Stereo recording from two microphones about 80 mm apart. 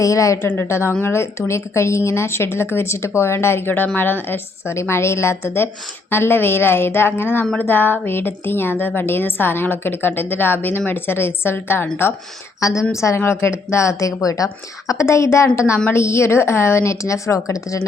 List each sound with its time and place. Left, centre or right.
0.0 s speech: left
0.4 s a woman's voice: left
12.5 s a woman's voice: left